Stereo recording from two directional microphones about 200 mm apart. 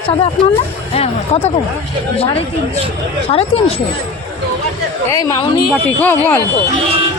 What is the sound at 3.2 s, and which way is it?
Speech, 30° left (ahead or behind).